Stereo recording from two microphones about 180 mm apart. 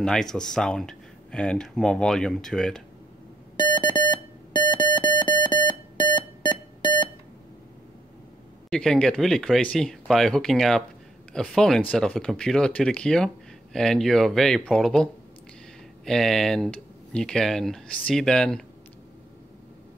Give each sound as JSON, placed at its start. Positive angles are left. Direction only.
{"t": 0.0, "sound": "speech", "side_deg": 5}
{"t": 3.5, "sound": "music", "side_deg": 25}
{"t": 8.6, "sound": "speech", "side_deg": 5}
{"t": 16.1, "sound": "speech", "side_deg": 0}